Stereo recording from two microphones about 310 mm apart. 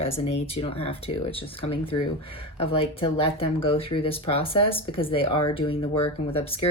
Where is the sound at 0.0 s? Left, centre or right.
Centre.